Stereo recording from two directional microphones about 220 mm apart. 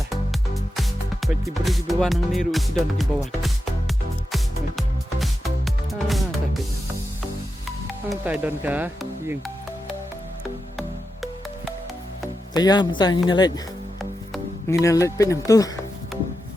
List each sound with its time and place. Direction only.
0.1 s music: centre (ahead or behind)
8.1 s speech: 5° right (ahead or behind)
10.8 s music: centre (ahead or behind)
12.5 s speech: 20° left (ahead or behind)
14.7 s speech: 15° left (ahead or behind)